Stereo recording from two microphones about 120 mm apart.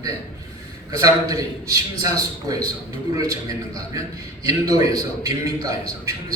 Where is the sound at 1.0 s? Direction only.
30° right (ahead or behind).